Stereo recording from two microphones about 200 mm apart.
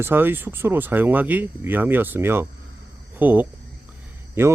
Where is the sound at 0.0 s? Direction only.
10° right (ahead or behind).